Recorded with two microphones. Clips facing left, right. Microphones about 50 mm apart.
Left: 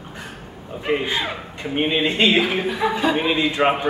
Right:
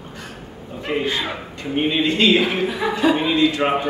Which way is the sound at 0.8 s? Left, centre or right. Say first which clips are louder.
Even; centre.